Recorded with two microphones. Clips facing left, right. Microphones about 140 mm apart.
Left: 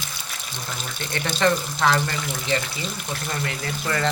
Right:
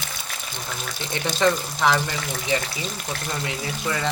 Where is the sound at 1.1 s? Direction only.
15° right (ahead or behind).